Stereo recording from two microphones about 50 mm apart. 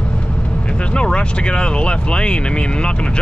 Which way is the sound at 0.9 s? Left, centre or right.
Left.